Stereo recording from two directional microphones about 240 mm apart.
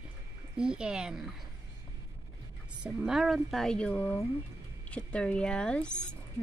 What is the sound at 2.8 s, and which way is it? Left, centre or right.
A woman's voice, centre.